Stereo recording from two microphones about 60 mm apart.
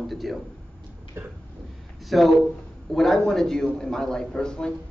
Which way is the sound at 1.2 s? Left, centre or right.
Right.